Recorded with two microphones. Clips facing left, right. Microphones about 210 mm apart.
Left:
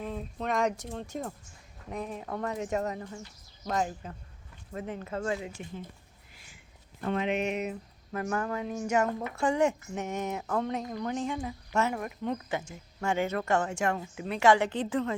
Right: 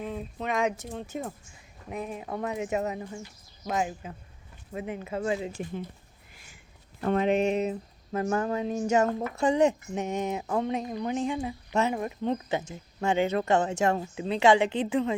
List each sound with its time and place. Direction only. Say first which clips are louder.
0.0 s speech: right 1 dB; 5° right (ahead or behind)
5.6 s speech: right 7 dB; 45° right (ahead or behind)
6.3 s a sound: right 2 dB; 50° right (ahead or behind)
7.0 s a woman's voice: right 5 dB; 40° right (ahead or behind); by 15.1 s 15° right (ahead or behind)